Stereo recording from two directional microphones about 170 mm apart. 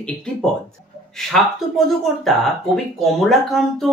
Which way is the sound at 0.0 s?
5° left (ahead or behind).